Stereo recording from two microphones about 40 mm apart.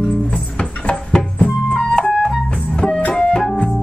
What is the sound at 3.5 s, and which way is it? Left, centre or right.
Organ, centre.